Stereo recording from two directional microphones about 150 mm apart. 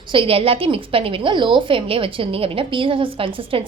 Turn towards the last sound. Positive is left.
turn(degrees=-35)  # may be behind; listen again after turning